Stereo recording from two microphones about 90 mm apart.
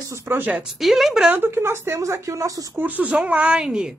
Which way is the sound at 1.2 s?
25° right (ahead or behind).